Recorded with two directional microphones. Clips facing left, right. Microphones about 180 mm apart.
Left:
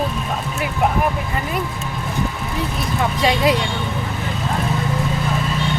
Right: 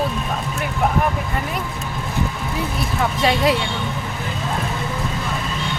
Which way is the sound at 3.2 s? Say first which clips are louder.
Left 1 dB; centre (ahead or behind).